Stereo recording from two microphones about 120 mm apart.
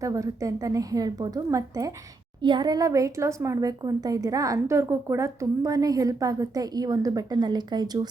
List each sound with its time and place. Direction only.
0.0 s a woman's voice: 25° right (ahead or behind)
2.4 s a woman's voice: 40° right (ahead or behind)